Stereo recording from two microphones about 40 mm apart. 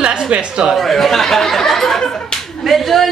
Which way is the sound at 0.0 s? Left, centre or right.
Right.